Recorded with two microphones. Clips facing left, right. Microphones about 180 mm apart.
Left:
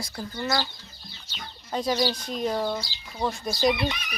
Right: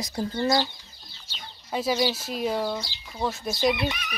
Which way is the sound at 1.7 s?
5° right (ahead or behind).